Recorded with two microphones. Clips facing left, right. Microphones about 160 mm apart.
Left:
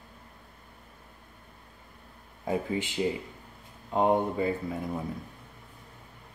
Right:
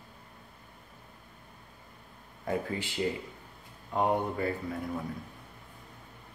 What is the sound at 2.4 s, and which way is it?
Speech, 20° left (ahead or behind).